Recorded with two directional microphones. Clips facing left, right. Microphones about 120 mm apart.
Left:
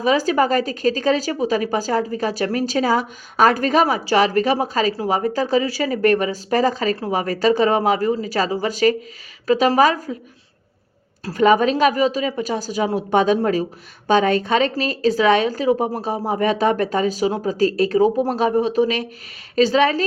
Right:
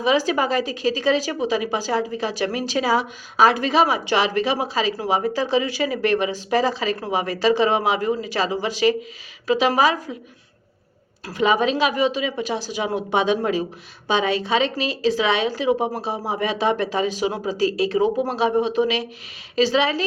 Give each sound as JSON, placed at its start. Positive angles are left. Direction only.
{"t": 0.0, "sound": "a woman's voice", "side_deg": 40}
{"t": 11.3, "sound": "a woman's voice", "side_deg": 45}